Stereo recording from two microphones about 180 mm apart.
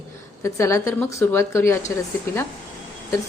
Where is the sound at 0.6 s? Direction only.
15° left (ahead or behind).